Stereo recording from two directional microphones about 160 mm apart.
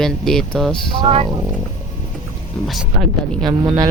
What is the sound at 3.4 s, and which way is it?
Speech, 25° right (ahead or behind).